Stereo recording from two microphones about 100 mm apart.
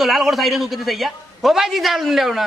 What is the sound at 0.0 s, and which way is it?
A man's voice, centre (ahead or behind).